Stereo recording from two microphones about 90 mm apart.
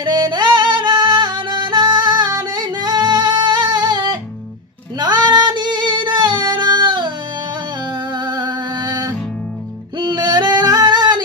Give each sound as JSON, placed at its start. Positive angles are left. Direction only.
{"t": 0.0, "sound": "music", "side_deg": -55}
{"t": 4.9, "sound": "female singing", "side_deg": -50}
{"t": 7.9, "sound": "music", "side_deg": -55}
{"t": 9.9, "sound": "female singing", "side_deg": -55}